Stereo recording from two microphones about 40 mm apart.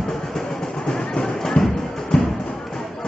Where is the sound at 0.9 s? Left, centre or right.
Left.